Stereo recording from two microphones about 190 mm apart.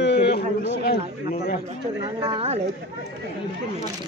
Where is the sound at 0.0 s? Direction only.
60° left (ahead or behind).